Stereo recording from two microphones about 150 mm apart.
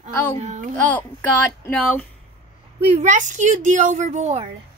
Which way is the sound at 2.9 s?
55° right (ahead or behind).